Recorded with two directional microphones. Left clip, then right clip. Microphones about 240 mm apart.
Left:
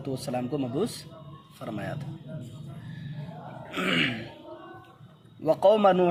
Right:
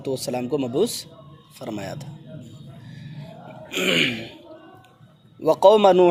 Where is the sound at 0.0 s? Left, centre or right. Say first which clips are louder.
Right 5 dB; right.